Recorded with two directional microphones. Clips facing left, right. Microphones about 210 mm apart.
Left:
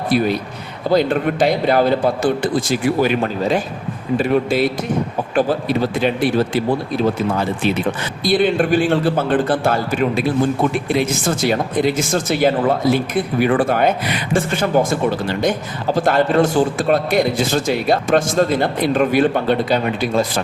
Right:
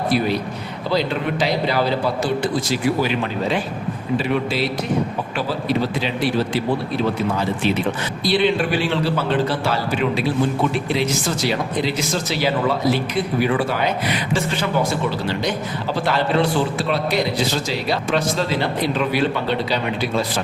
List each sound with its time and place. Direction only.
0.9 s a man's voice: 50° left (ahead or behind)
8.2 s a man's voice: 50° left (ahead or behind)